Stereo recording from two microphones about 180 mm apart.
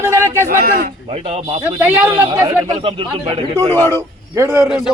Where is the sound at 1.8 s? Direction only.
15° right (ahead or behind).